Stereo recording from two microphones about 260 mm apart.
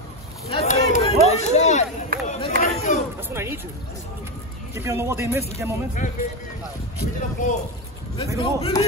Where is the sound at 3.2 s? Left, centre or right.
Centre.